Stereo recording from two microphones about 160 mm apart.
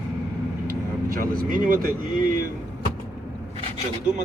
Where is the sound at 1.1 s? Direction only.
60° right (ahead or behind).